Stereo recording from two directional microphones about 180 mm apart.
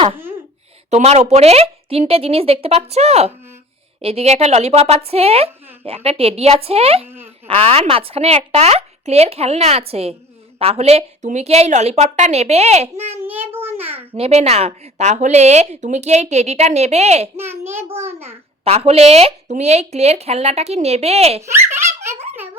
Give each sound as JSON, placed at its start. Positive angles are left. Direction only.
{"t": 0.9, "sound": "speech", "side_deg": -40}
{"t": 13.2, "sound": "a sound", "side_deg": -10}
{"t": 14.1, "sound": "speech", "side_deg": -35}
{"t": 17.3, "sound": "a child's voice", "side_deg": -15}
{"t": 18.6, "sound": "speech", "side_deg": -35}